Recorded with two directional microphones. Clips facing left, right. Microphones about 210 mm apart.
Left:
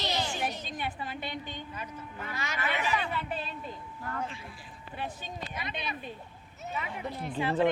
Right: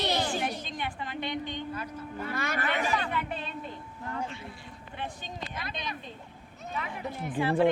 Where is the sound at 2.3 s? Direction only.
55° right (ahead or behind).